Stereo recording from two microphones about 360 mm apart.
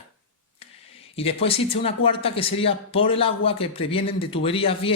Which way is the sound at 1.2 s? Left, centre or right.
Centre.